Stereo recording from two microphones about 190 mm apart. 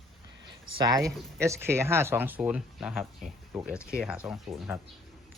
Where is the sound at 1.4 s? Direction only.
15° right (ahead or behind).